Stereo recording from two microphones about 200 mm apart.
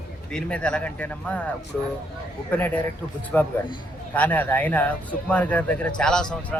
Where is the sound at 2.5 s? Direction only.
10° left (ahead or behind).